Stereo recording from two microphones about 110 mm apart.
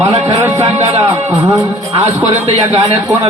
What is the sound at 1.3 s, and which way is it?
Speech, 30° right (ahead or behind).